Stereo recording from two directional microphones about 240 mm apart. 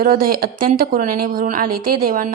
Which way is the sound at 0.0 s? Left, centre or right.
Right.